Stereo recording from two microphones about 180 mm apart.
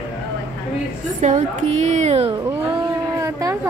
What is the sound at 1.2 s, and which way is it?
Speech, 40° right (ahead or behind).